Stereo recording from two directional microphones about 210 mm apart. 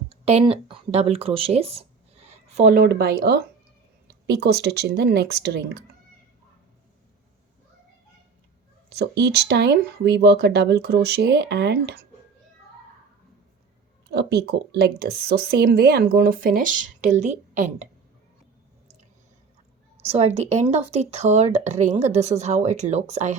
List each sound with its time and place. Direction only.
0.1 s speech: 30° right (ahead or behind)
2.6 s speech: 40° right (ahead or behind)
8.9 s speech: 50° right (ahead or behind)
14.1 s speech: 55° right (ahead or behind); by 17.8 s 35° right (ahead or behind)
20.1 s speech: 30° right (ahead or behind)